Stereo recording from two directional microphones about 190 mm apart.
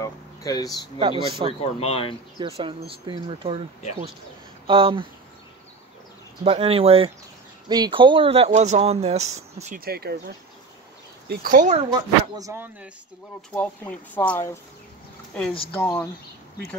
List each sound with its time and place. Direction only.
0.0 s a sound: 20° left (ahead or behind)
0.9 s speech: 25° right (ahead or behind)
1.6 s speech: 35° left (ahead or behind)
2.3 s speech: 30° right (ahead or behind)
4.6 s speech: 25° right (ahead or behind)
6.4 s speech: 30° right (ahead or behind)
9.8 s speech: 55° right (ahead or behind); by 11.9 s 35° right (ahead or behind)
11.9 s speech: 15° right (ahead or behind)
13.6 s speech: 5° left (ahead or behind)
15.7 s speech: 10° left (ahead or behind)